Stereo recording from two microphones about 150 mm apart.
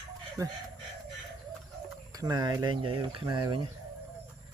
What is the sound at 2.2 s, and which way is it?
Speech, 25° right (ahead or behind).